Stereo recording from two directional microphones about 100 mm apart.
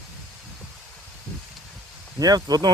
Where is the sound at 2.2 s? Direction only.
40° right (ahead or behind).